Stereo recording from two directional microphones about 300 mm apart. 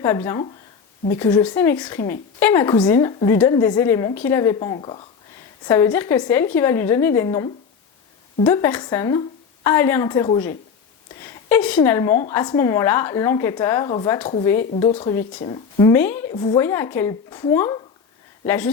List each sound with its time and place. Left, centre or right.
0.0 s a woman's voice: centre